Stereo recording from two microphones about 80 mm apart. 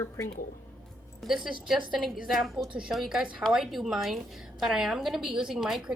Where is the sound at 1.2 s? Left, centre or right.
Centre.